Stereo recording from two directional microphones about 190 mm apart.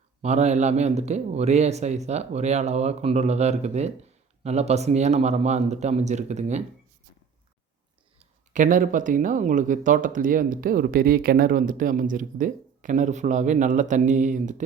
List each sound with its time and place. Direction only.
0.2 s speech: 35° right (ahead or behind)
8.5 s speech: 45° right (ahead or behind)